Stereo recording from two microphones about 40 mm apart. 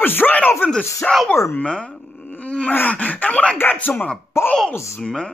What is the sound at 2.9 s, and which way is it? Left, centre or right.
Speech, left.